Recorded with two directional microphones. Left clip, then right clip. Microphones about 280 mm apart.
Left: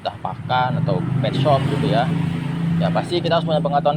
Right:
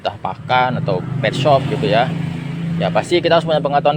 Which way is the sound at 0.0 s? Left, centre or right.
Right.